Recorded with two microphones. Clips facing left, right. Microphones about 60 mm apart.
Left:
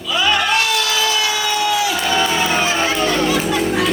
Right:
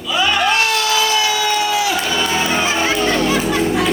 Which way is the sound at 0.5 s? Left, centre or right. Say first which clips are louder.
Right 1 dB; right.